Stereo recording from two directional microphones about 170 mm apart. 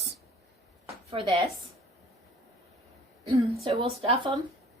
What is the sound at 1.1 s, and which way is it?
Speech, 30° right (ahead or behind).